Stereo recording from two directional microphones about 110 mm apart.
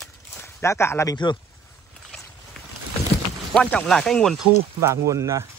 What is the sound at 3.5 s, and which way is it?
Speech, 10° left (ahead or behind).